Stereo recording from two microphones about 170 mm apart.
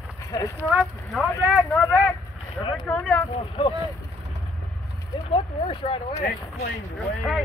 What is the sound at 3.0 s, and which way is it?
Speech, 5° left (ahead or behind).